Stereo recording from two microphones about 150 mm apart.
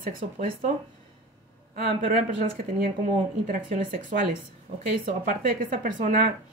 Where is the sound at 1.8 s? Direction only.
65° right (ahead or behind).